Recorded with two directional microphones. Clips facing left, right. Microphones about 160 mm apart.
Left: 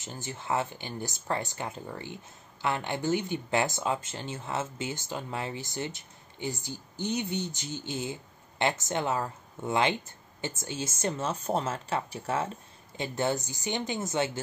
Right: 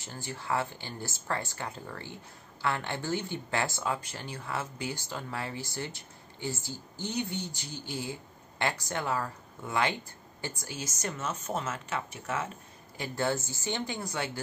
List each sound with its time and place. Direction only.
0.0 s speech: 20° left (ahead or behind)
12.9 s speech: 20° left (ahead or behind)